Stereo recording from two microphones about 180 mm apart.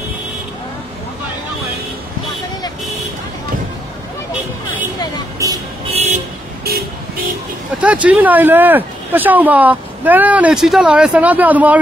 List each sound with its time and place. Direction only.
5.4 s music: 20° right (ahead or behind)
6.6 s vehicle: 60° right (ahead or behind)
7.8 s speech: 5° right (ahead or behind)